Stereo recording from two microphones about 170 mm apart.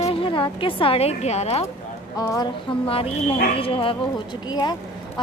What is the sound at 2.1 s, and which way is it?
Speech, 20° left (ahead or behind).